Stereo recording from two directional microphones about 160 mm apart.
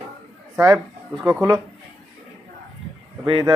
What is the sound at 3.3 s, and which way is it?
Speech, 30° right (ahead or behind).